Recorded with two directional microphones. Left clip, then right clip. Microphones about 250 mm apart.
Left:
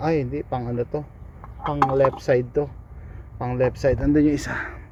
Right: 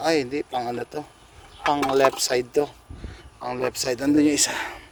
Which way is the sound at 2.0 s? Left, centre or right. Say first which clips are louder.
Left 1 dB; right.